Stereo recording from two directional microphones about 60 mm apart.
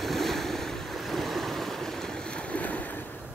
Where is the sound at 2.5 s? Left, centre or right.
Left.